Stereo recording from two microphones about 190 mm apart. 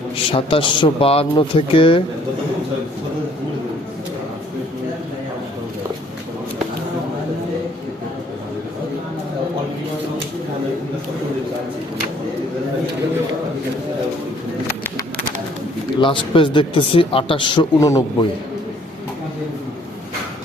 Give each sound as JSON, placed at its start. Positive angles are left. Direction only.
{"t": 0.3, "sound": "speech", "side_deg": 30}
{"t": 16.0, "sound": "speech", "side_deg": 25}